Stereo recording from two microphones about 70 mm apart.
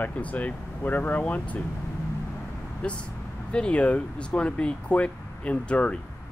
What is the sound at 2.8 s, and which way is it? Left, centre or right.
Speech, centre.